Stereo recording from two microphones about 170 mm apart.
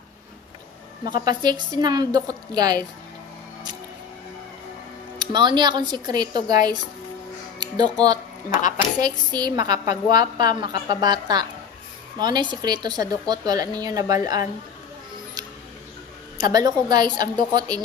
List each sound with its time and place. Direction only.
1.2 s a woman's voice: 25° right (ahead or behind)
5.2 s a woman's voice: 25° right (ahead or behind)
16.3 s a woman's voice: 25° right (ahead or behind)